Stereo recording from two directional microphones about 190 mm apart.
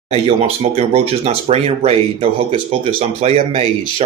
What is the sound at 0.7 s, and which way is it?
Speech, 35° right (ahead or behind).